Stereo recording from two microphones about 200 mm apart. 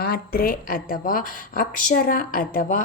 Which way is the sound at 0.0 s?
50° left (ahead or behind).